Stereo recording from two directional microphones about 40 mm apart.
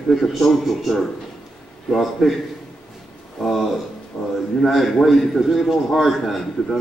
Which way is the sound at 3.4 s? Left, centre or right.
Centre.